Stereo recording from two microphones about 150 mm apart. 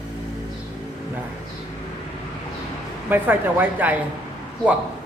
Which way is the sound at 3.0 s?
10° right (ahead or behind).